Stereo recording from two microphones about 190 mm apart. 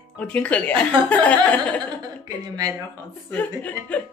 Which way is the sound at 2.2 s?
20° right (ahead or behind).